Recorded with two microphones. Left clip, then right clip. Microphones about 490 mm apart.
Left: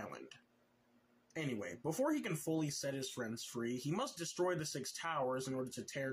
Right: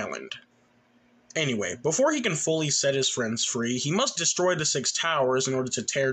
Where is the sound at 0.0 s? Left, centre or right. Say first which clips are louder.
Right 16 dB; left.